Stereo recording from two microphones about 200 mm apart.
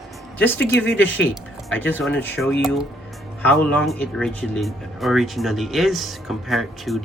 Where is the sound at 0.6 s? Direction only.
60° left (ahead or behind).